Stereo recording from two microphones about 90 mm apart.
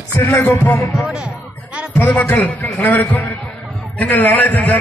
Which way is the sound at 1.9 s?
20° left (ahead or behind).